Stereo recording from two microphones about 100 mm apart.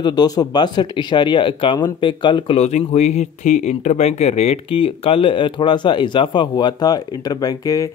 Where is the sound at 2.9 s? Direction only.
90° left.